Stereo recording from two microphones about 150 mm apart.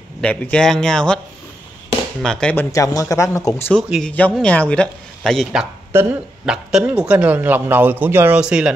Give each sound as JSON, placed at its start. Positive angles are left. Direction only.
{"t": 0.2, "sound": "a man's voice", "side_deg": 10}
{"t": 2.2, "sound": "a man's voice", "side_deg": 5}
{"t": 2.7, "sound": "speech", "side_deg": 20}
{"t": 3.7, "sound": "a man's voice", "side_deg": 5}
{"t": 5.9, "sound": "a man's voice", "side_deg": -15}
{"t": 6.4, "sound": "a man's voice", "side_deg": -5}